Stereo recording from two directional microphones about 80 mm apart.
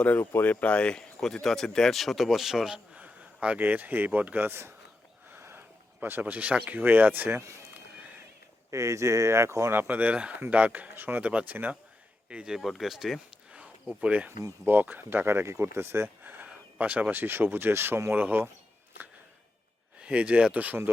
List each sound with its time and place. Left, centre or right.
0.0 s speech: left; by 4.7 s right
5.3 s a sound: right
6.7 s speech: right
8.7 s speech: right
9.8 s speech: centre
12.5 s speech: centre
14.0 s speech: centre
20.0 s speech: centre